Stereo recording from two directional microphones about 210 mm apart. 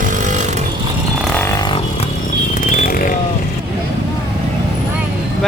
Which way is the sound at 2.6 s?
40° left (ahead or behind).